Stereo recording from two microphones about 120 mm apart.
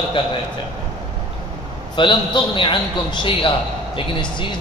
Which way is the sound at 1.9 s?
45° left (ahead or behind).